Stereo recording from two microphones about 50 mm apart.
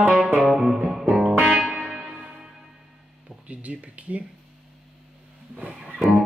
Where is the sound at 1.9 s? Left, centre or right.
Centre.